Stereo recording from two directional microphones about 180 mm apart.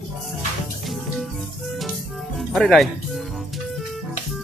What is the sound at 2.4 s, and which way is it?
Speech, centre (ahead or behind).